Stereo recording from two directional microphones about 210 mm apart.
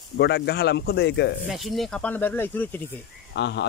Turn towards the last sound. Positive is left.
turn(degrees=55)  # may be behind; listen again after turning